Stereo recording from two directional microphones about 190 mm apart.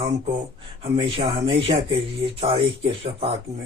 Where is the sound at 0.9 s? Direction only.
25° right (ahead or behind).